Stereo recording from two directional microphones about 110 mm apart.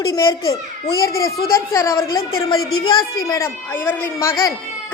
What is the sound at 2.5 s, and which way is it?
Speech, 45° left (ahead or behind).